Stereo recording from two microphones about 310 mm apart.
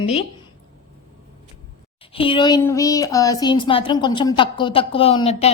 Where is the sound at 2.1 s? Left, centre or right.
Centre.